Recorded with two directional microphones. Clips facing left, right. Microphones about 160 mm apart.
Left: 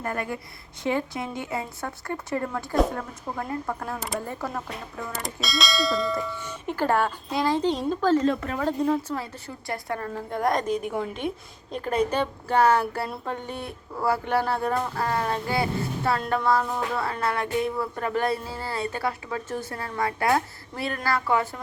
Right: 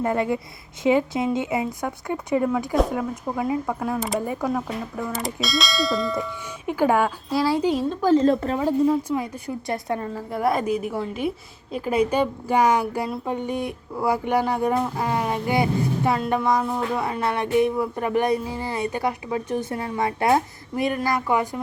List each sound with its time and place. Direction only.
0.0 s speech: 20° right (ahead or behind); by 6.7 s centre (ahead or behind)
6.7 s speech: 10° right (ahead or behind)
8.2 s speech: 30° right (ahead or behind)
8.5 s speech: 10° right (ahead or behind)
10.2 s speech: 5° right (ahead or behind)